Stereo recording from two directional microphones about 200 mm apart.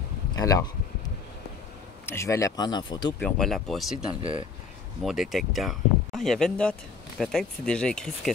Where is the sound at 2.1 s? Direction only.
15° left (ahead or behind).